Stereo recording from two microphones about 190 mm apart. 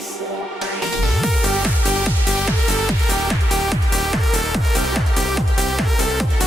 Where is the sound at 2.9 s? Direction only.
Centre (ahead or behind).